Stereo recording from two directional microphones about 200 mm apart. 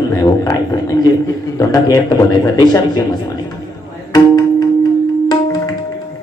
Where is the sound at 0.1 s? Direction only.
15° left (ahead or behind).